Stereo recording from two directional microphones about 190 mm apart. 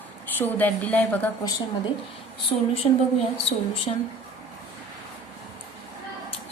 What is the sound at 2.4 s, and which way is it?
Speech, 30° left (ahead or behind).